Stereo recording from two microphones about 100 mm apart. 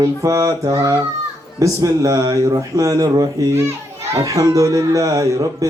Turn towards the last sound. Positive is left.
turn(degrees=-35)  # may be behind; listen again after turning